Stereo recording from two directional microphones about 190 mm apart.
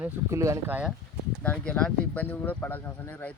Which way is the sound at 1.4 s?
5° left (ahead or behind).